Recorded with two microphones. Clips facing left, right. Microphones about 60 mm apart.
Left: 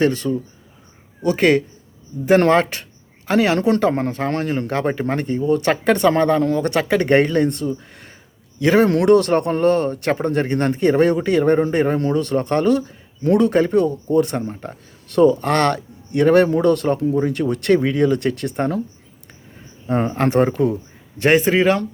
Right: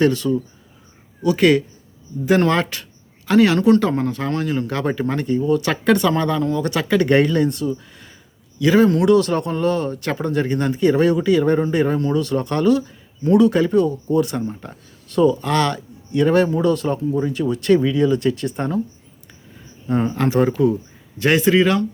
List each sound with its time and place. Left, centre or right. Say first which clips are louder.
0.0 s speech: right 1 dB; left
19.9 s speech: left 1 dB; left